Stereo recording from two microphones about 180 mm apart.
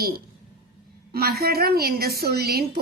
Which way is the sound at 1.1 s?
60° right (ahead or behind).